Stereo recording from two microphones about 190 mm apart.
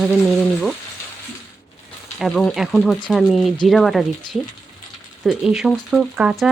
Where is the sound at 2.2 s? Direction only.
Centre (ahead or behind).